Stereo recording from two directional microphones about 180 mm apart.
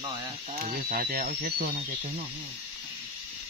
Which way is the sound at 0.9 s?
50° right (ahead or behind).